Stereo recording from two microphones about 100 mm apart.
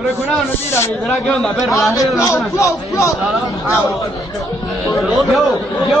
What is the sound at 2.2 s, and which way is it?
Speech, 30° left (ahead or behind).